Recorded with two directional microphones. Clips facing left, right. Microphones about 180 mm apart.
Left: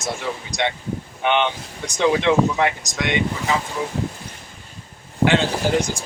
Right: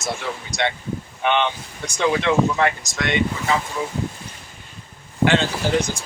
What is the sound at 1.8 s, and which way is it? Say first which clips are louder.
Speech: left 2 dB; 15° left (ahead or behind).